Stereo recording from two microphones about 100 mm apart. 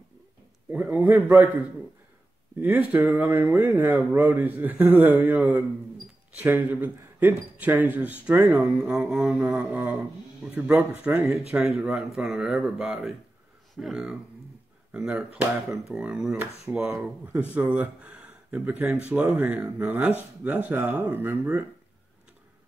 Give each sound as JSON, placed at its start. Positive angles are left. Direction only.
{"t": 0.7, "sound": "a man's voice", "side_deg": -15}
{"t": 11.3, "sound": "speech", "side_deg": -5}
{"t": 16.7, "sound": "a man's voice", "side_deg": -20}